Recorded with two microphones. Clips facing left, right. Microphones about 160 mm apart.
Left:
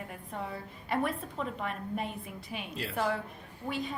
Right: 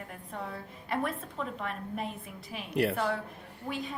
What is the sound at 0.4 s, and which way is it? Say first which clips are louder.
A woman's voice: left 1 dB; centre (ahead or behind).